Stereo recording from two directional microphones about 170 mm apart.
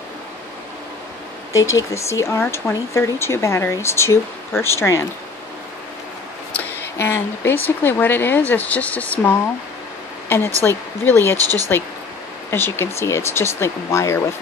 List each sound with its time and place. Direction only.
1.5 s speech: 20° left (ahead or behind)
6.5 s speech: 10° left (ahead or behind)
11.3 s speech: 20° right (ahead or behind)
12.4 s speech: 15° left (ahead or behind)